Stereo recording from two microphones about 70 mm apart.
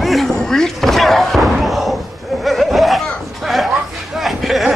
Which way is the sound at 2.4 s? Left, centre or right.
Centre.